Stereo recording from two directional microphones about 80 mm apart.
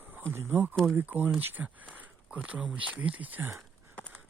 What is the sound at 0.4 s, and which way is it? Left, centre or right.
Speech, centre.